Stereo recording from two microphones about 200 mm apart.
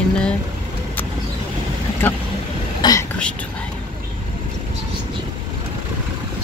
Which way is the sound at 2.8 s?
20° left (ahead or behind).